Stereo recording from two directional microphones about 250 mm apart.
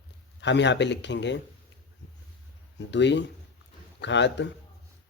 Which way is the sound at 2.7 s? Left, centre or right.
Left.